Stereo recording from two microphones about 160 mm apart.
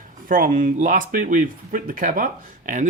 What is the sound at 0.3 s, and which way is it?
Speech, 55° right (ahead or behind).